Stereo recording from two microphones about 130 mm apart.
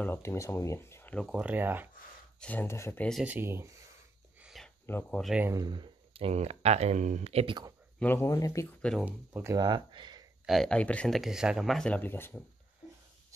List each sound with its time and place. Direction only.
0.0 s speech: 20° left (ahead or behind)
1.3 s speech: 10° right (ahead or behind)
2.4 s speech: 15° left (ahead or behind)
3.3 s speech: 15° right (ahead or behind)
4.4 s a sound: 5° right (ahead or behind)
4.9 s speech: 15° left (ahead or behind)
5.5 s speech: 30° right (ahead or behind); by 7.5 s 50° right (ahead or behind)
8.0 s speech: 15° left (ahead or behind)
9.0 s speech: 15° right (ahead or behind)
9.6 s speech: 35° right (ahead or behind)
10.4 s speech: centre (ahead or behind)
11.1 s speech: 5° right (ahead or behind); by 12.4 s 15° left (ahead or behind)